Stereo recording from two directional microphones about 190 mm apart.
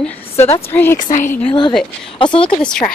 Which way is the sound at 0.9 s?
40° left (ahead or behind).